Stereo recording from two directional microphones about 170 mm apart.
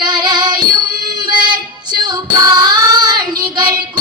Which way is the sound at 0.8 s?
60° right (ahead or behind).